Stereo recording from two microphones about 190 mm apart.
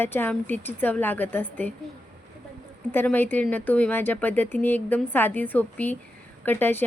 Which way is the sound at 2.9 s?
10° left (ahead or behind).